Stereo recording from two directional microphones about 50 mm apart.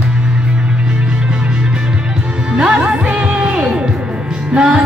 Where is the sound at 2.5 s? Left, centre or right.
Right.